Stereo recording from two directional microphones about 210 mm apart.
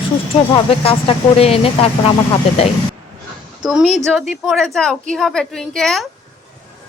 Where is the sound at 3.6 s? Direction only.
5° right (ahead or behind).